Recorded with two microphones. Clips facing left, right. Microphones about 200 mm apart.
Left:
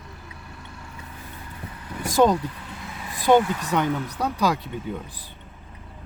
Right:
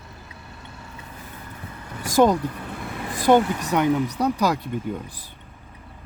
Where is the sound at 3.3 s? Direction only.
15° right (ahead or behind).